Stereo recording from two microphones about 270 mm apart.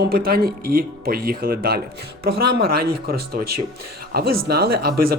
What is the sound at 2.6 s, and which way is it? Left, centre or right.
Speech, right.